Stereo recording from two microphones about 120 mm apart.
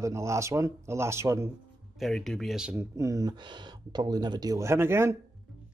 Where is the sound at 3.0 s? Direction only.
30° right (ahead or behind).